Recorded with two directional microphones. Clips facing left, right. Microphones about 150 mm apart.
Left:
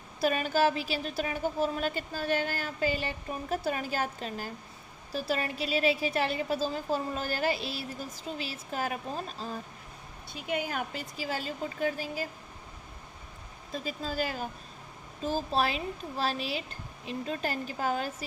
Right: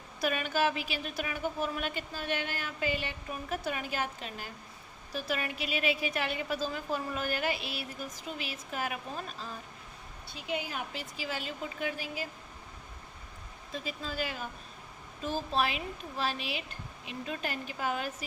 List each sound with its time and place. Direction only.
0.2 s a woman's voice: 35° left (ahead or behind)
10.4 s a woman's voice: 50° left (ahead or behind)
13.7 s a woman's voice: 40° left (ahead or behind)